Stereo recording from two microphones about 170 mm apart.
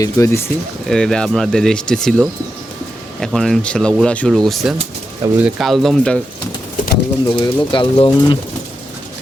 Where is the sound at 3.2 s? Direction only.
Centre (ahead or behind).